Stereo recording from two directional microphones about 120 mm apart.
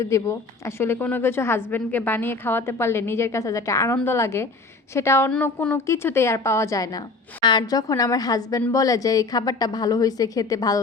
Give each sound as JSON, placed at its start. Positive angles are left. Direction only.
{"t": 0.0, "sound": "a woman's voice", "side_deg": 25}